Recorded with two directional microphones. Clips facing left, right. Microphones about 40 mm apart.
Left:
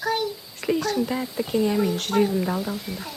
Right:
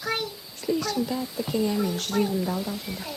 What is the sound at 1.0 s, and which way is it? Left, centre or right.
Speech, left.